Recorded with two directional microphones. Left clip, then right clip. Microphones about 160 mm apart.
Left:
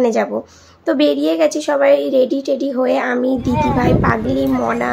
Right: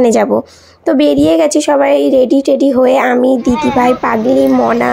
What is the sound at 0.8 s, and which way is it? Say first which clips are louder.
A woman's voice: right 5 dB; 40° right (ahead or behind).